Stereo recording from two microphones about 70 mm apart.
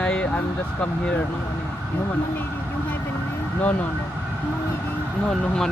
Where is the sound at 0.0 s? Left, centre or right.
Centre.